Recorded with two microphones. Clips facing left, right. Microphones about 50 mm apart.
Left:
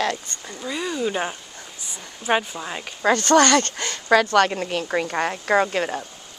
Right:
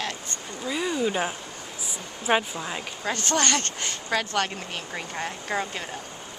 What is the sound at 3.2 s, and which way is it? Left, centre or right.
A woman's voice, left.